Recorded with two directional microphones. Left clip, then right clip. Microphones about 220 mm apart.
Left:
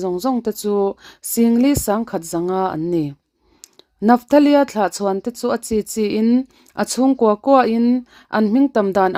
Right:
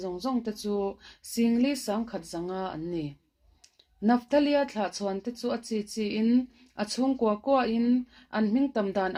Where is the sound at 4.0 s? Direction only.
55° left (ahead or behind).